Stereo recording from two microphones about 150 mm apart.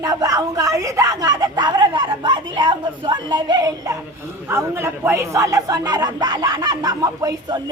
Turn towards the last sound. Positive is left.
turn(degrees=-25)  # may be behind; listen again after turning